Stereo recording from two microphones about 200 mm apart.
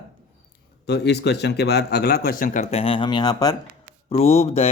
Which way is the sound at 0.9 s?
55° left (ahead or behind).